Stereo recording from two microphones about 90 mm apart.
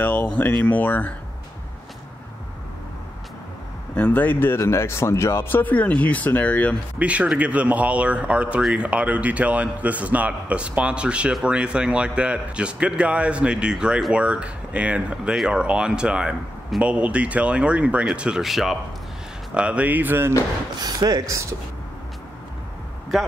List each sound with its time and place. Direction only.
0.0 s speech: 15° left (ahead or behind)
3.9 s speech: 15° left (ahead or behind)
7.0 s speech: 15° right (ahead or behind)
19.5 s speech: 10° right (ahead or behind)
20.8 s speech: 50° right (ahead or behind)